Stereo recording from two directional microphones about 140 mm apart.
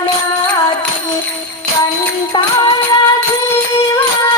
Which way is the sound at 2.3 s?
35° left (ahead or behind).